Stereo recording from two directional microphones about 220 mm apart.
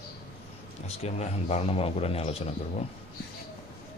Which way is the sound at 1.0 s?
30° left (ahead or behind).